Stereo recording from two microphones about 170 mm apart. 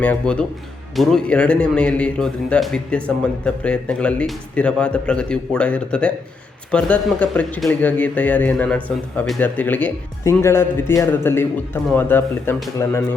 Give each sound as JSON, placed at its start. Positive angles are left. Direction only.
{"t": 0.0, "sound": "speech", "side_deg": 5}